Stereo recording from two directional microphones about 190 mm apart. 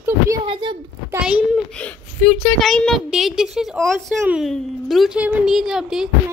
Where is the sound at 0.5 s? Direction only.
25° right (ahead or behind).